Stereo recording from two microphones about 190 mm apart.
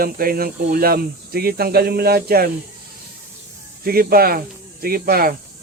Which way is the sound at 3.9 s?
50° right (ahead or behind).